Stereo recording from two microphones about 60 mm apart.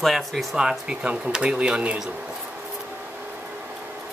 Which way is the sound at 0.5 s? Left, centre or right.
Centre.